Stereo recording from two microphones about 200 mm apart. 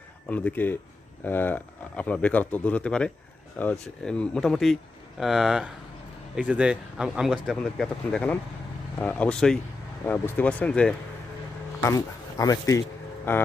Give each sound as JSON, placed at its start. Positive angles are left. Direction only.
{"t": 0.3, "sound": "speech", "side_deg": 5}
{"t": 11.8, "sound": "speech", "side_deg": 15}